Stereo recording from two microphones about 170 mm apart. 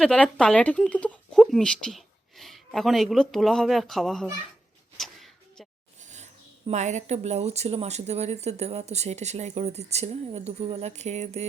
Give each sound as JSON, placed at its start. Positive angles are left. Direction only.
{"t": 0.0, "sound": "speech", "side_deg": 5}
{"t": 4.9, "sound": "a sound", "side_deg": 0}
{"t": 6.0, "sound": "speech", "side_deg": -45}